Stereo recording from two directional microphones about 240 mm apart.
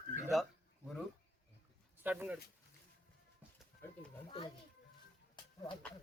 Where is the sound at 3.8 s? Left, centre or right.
Centre.